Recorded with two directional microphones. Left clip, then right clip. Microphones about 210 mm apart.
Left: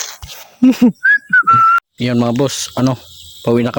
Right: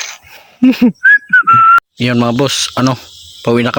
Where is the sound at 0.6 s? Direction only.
Centre (ahead or behind).